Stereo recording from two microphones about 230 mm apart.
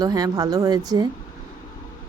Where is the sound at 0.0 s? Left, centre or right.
Centre.